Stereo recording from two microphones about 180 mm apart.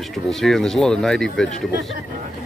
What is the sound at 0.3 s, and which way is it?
Speech, centre (ahead or behind).